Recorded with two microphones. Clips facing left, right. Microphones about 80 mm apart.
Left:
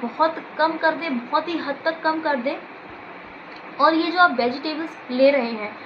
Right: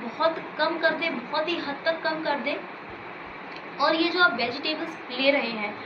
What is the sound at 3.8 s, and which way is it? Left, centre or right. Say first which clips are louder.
A woman's voice: left 5 dB; left.